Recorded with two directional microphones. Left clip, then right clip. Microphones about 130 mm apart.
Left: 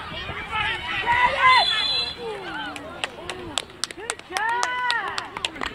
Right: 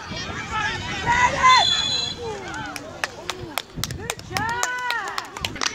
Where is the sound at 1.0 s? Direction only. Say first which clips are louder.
Right 1 dB; 20° left (ahead or behind).